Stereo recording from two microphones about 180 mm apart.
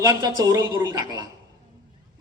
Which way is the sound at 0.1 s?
20° right (ahead or behind).